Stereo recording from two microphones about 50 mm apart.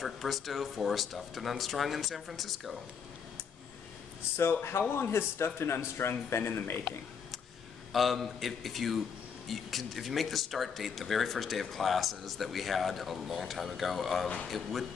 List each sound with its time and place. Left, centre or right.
0.0 s speech: centre
4.4 s a man's voice: left
6.4 s a man's voice: left
7.9 s speech: centre